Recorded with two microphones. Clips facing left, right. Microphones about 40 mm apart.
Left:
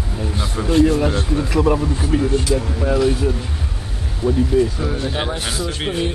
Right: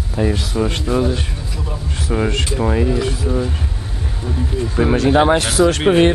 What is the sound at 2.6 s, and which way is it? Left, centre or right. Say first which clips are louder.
Speech: right 6 dB; right.